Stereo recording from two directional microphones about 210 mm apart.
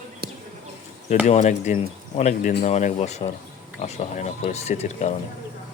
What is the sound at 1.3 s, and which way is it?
Speech, 35° left (ahead or behind).